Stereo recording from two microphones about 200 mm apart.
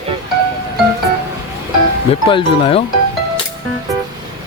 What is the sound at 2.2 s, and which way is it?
Speech, 25° left (ahead or behind).